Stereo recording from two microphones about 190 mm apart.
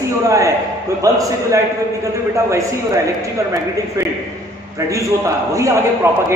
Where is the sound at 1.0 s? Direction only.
15° right (ahead or behind).